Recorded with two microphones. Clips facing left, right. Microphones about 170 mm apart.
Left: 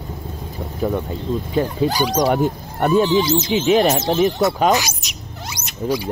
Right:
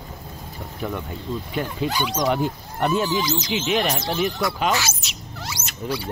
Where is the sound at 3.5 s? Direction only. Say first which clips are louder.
Left 8 dB; 40° left (ahead or behind).